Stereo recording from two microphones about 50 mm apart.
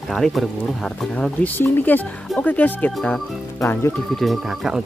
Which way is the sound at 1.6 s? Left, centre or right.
Left.